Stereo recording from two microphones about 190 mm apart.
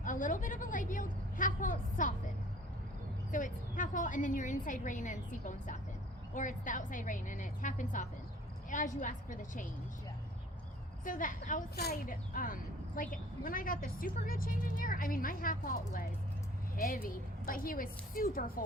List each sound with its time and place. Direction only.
0.0 s a woman's voice: 45° left (ahead or behind)
3.3 s a woman's voice: 45° left (ahead or behind)
11.0 s a woman's voice: 45° left (ahead or behind)